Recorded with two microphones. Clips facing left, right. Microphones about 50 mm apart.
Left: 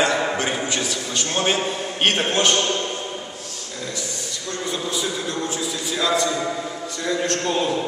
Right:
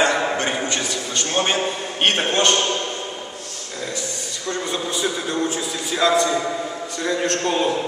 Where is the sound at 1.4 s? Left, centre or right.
Centre.